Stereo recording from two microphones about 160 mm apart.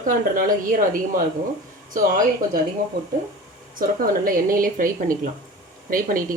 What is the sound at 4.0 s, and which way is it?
Speech, 60° right (ahead or behind).